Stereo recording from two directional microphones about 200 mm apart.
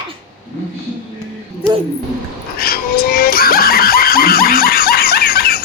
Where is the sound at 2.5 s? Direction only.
50° left (ahead or behind).